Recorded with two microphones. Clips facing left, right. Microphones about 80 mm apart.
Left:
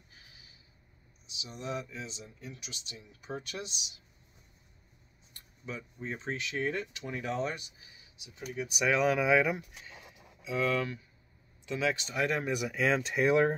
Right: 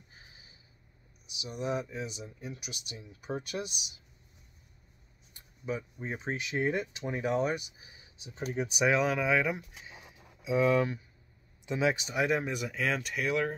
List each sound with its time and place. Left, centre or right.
0.1 s snort: right
1.4 s speech: centre
5.3 s speech: centre
8.8 s speech: centre
10.4 s speech: right
12.5 s speech: centre
13.0 s speech: left